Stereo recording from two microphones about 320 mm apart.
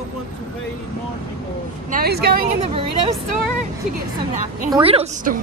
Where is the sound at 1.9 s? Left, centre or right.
Right.